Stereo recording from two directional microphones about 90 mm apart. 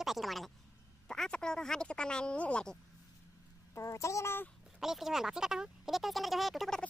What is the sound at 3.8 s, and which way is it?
Speech, 35° left (ahead or behind).